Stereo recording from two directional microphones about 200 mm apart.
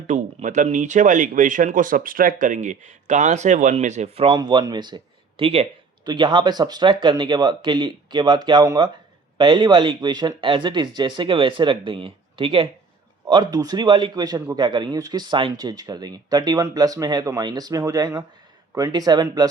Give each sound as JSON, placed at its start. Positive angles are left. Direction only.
{"t": 0.1, "sound": "a man's voice", "side_deg": -35}